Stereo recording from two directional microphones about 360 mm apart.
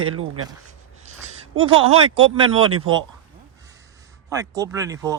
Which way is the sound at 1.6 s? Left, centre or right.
Centre.